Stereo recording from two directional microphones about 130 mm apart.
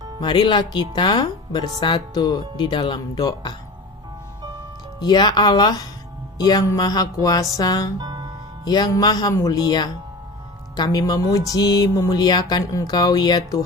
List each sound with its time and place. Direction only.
0.2 s speech: 35° left (ahead or behind)
3.2 s music: 30° left (ahead or behind)
4.9 s speech: 30° left (ahead or behind)
6.4 s music: 30° left (ahead or behind)
7.9 s music: 30° right (ahead or behind)
8.6 s speech: 30° left (ahead or behind)